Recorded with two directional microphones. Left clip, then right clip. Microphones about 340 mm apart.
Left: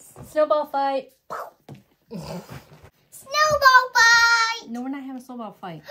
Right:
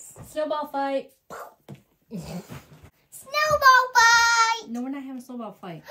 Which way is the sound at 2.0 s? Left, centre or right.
Centre.